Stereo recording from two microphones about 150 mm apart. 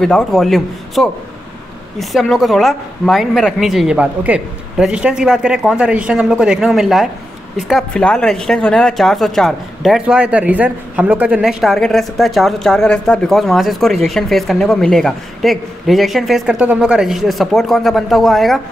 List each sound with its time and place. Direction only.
0.0 s a woman's voice: centre (ahead or behind)